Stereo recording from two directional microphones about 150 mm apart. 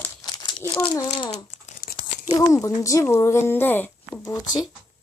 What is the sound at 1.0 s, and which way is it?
Speech, 40° left (ahead or behind).